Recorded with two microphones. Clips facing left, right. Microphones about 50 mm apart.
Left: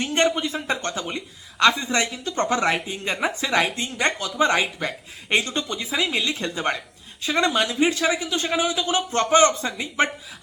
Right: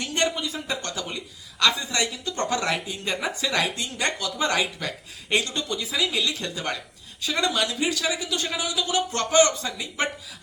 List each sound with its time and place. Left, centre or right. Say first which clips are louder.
0.0 s speech: left 4 dB; left